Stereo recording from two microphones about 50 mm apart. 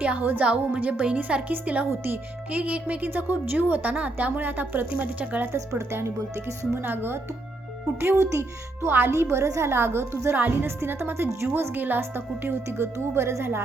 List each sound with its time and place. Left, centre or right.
0.0 s a woman's voice: right
5.5 s a woman's voice: right
6.8 s speech: right
7.9 s speech: right
8.9 s speech: right
9.1 s a woman's voice: right
10.3 s speech: right
10.7 s a woman's voice: right
11.7 s speech: right